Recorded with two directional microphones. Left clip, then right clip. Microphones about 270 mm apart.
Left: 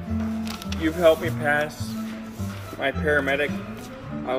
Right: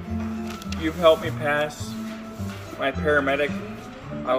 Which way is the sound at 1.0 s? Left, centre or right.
Centre.